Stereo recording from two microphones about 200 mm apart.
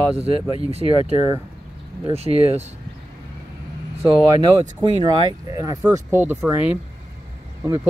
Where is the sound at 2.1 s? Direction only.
30° right (ahead or behind).